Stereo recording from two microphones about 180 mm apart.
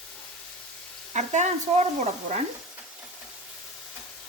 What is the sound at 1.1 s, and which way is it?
Speech, 40° right (ahead or behind).